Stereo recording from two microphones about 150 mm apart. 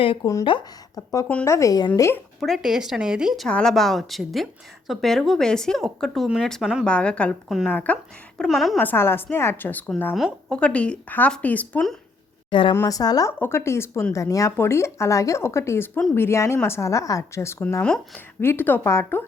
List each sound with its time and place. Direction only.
0.0 s speech: 35° left (ahead or behind)
1.5 s a woman's voice: 20° left (ahead or behind)
2.4 s a woman's voice: centre (ahead or behind)
7.7 s a woman's voice: 10° left (ahead or behind)
8.8 s speech: 15° left (ahead or behind)
12.5 s a woman's voice: 35° left (ahead or behind)
12.7 s a woman's voice: 20° left (ahead or behind)
17.8 s speech: 5° left (ahead or behind)